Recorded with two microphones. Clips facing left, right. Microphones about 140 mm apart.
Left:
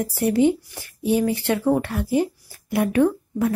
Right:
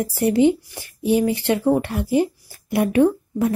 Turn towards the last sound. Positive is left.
turn(degrees=-25)  # may be behind; listen again after turning